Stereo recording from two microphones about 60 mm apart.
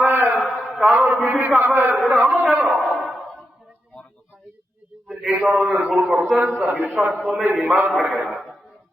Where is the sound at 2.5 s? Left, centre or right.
Centre.